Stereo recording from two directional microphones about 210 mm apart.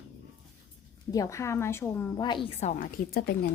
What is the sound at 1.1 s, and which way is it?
A woman's voice, 15° left (ahead or behind).